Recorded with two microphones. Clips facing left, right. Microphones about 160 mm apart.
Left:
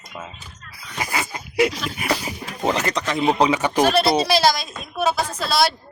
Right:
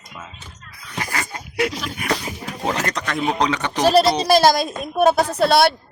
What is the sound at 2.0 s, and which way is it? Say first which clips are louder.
Speech: even; 5° left (ahead or behind).